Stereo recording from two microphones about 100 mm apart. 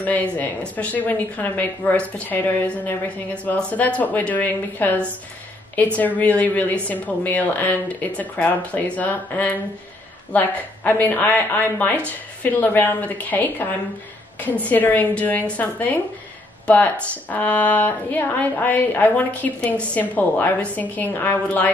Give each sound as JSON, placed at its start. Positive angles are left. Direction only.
{"t": 0.0, "sound": "a woman's voice", "side_deg": 15}
{"t": 14.7, "sound": "a woman's voice", "side_deg": 15}